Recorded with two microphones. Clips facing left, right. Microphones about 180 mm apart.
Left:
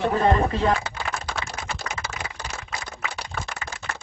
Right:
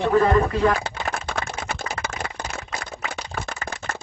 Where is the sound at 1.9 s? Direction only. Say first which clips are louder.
Right 4 dB; 55° right (ahead or behind).